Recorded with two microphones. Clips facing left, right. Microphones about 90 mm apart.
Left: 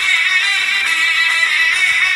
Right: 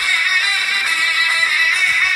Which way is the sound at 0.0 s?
10° right (ahead or behind).